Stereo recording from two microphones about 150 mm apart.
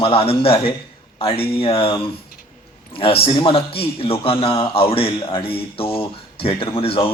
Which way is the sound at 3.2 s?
35° left (ahead or behind).